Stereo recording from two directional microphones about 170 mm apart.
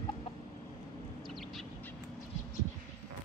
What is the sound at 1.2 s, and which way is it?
Bird, centre (ahead or behind).